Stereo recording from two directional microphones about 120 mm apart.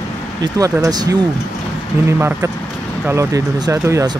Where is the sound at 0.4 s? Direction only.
30° right (ahead or behind).